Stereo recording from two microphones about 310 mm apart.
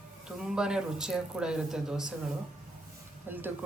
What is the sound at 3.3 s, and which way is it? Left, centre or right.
Speech, centre.